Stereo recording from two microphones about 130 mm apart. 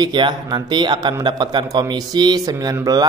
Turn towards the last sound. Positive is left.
turn(degrees=-25)  # may be behind; listen again after turning